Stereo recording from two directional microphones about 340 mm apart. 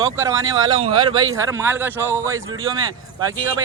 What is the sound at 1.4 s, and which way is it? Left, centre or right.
Speech, centre.